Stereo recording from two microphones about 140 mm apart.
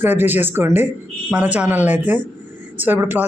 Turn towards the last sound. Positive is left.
turn(degrees=-15)  # may be behind; listen again after turning